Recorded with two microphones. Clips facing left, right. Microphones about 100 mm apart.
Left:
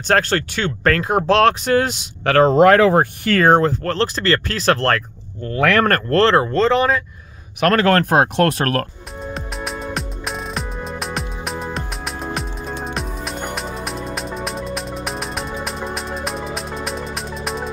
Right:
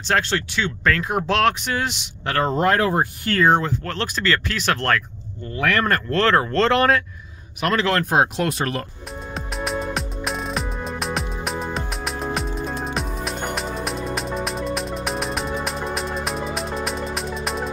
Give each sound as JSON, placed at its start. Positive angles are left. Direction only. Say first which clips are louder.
{"t": 0.1, "sound": "speech", "louder": "left 4 dB", "side_deg": 45}
{"t": 2.2, "sound": "speech", "louder": "left 8 dB", "side_deg": 90}
{"t": 3.4, "sound": "speech", "louder": "left 4 dB", "side_deg": 45}
{"t": 5.4, "sound": "speech", "louder": "left 5 dB", "side_deg": 90}
{"t": 5.9, "sound": "speech", "louder": "left 4 dB", "side_deg": 50}
{"t": 6.1, "sound": "speech", "louder": "left 4 dB", "side_deg": 30}
{"t": 6.4, "sound": "speech", "louder": "left 2 dB", "side_deg": 5}
{"t": 7.6, "sound": "speech", "louder": "left 6 dB", "side_deg": 50}
{"t": 9.2, "sound": "music", "louder": "left 1 dB", "side_deg": 0}